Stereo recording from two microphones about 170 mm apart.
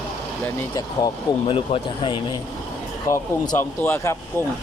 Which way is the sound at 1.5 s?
30° left (ahead or behind).